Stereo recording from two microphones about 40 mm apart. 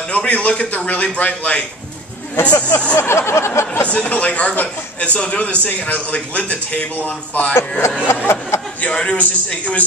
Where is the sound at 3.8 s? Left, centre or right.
Left.